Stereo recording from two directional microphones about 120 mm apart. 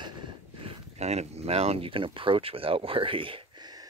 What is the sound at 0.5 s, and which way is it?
Speech, 55° right (ahead or behind).